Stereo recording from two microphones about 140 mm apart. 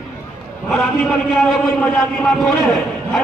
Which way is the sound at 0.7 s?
Centre (ahead or behind).